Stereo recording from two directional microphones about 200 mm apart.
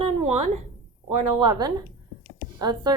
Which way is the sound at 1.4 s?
20° right (ahead or behind).